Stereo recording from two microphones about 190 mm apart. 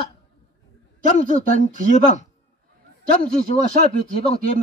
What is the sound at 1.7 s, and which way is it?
Speech, 40° left (ahead or behind).